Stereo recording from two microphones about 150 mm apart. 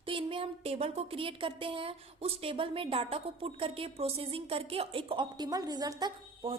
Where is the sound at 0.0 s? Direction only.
35° right (ahead or behind).